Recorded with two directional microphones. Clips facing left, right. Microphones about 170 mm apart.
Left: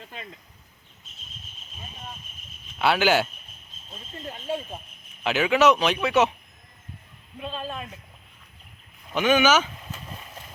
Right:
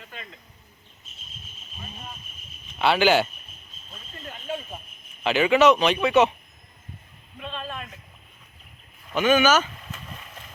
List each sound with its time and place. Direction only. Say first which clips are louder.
0.0 s a sound: left 2 dB; 30° left (ahead or behind)
2.7 s speech: right 2 dB; 5° left (ahead or behind)
3.9 s speech: left 3 dB; 30° left (ahead or behind)
5.2 s speech: right 2 dB; 5° left (ahead or behind)
7.3 s a man's voice: left 2 dB; 35° left (ahead or behind)
9.2 s speech: right 1 dB; 15° left (ahead or behind)
9.9 s horse: left 1 dB; 30° left (ahead or behind)